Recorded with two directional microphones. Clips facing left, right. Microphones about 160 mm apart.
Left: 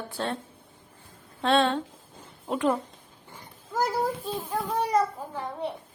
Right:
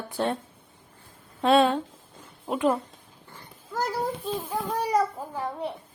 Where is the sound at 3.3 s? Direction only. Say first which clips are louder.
Left 2 dB; 10° left (ahead or behind).